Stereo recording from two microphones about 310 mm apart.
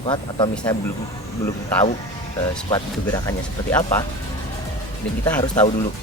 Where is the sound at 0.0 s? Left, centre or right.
Centre.